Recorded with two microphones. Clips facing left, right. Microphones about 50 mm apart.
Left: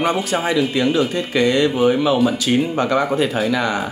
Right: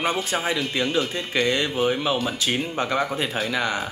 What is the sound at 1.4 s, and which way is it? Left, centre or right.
Speech, centre.